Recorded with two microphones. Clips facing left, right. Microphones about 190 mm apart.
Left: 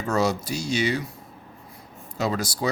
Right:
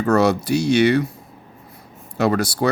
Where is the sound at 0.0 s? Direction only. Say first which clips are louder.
Right 7 dB; 60° right (ahead or behind).